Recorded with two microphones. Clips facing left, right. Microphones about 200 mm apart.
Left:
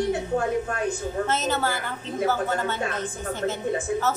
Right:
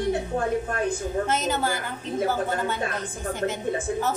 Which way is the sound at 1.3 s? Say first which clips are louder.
Left 1 dB; 15° right (ahead or behind).